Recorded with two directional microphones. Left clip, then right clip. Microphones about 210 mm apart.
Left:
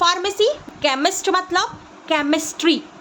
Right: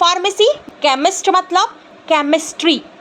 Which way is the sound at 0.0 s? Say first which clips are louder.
Right 5 dB; 10° right (ahead or behind).